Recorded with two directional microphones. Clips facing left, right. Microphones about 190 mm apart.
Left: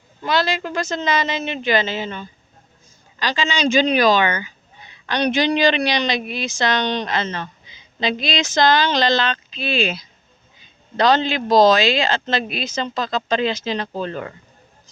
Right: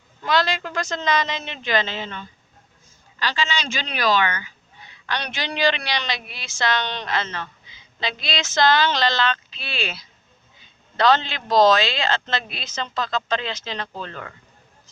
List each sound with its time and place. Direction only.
0.3 s speech: 5° left (ahead or behind)